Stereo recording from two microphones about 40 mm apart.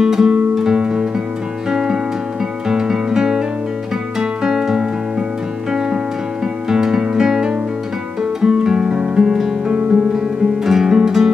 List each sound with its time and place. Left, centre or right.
0.0 s music: centre